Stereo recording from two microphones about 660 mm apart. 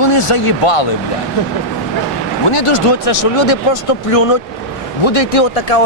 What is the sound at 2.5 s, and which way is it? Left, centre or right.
Speech, left.